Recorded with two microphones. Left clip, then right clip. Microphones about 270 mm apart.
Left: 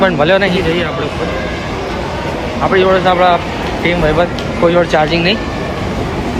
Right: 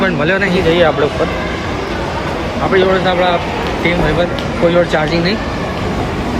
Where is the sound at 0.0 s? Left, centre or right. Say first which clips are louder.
Left 3 dB; centre.